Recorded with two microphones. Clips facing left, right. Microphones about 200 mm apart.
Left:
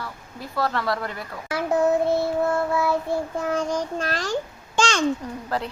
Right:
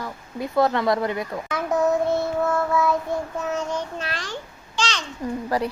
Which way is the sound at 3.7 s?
40° left (ahead or behind).